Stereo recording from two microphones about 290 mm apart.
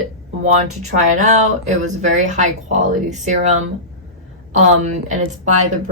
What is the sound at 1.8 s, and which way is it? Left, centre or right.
A woman's voice, right.